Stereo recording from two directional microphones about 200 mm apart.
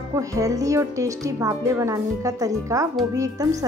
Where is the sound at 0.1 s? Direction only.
15° right (ahead or behind).